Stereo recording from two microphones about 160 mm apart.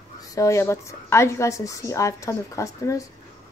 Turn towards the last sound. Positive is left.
turn(degrees=20)  # may be behind; listen again after turning